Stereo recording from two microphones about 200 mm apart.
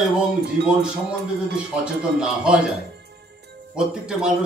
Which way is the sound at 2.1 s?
5° right (ahead or behind).